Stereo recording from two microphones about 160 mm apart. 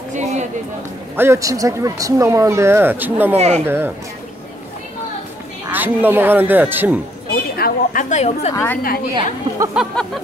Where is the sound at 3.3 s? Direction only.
45° right (ahead or behind).